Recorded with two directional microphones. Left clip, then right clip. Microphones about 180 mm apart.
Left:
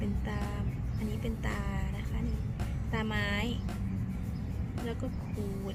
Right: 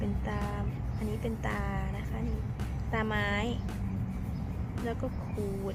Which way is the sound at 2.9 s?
45° left (ahead or behind).